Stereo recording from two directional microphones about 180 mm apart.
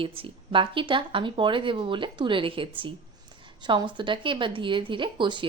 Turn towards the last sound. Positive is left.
turn(degrees=-25)  # may be behind; listen again after turning